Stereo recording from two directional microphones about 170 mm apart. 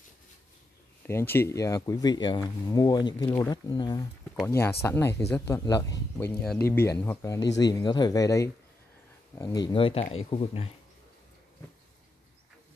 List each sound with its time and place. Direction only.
1.0 s speech: 15° left (ahead or behind)
4.5 s speech: 15° left (ahead or behind)
6.1 s speech: 5° left (ahead or behind); by 10.7 s 35° left (ahead or behind)